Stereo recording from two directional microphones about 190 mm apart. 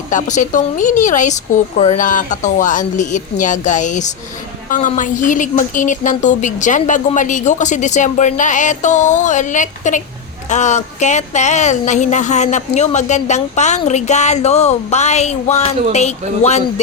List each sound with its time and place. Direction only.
0.1 s speech: 40° left (ahead or behind)